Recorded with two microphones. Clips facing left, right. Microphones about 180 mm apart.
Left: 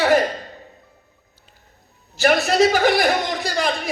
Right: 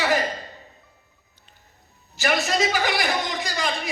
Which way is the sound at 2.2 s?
55° left (ahead or behind).